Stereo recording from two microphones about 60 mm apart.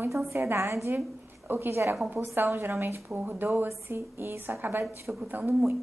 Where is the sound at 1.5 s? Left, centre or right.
Right.